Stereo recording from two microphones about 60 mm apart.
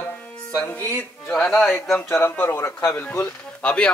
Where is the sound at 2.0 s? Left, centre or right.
Left.